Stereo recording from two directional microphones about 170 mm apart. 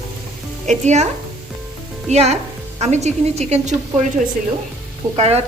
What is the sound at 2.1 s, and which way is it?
A woman's voice, 40° right (ahead or behind).